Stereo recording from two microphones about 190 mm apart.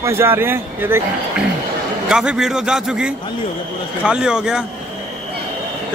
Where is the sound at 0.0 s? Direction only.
15° right (ahead or behind).